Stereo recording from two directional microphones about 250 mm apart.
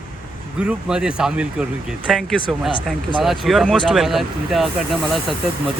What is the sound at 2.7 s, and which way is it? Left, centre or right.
Speech, centre.